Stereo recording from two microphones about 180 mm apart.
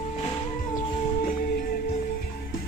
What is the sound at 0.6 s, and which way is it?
Music, 50° left (ahead or behind).